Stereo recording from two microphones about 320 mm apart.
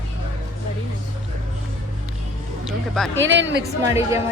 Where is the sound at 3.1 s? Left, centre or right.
Right.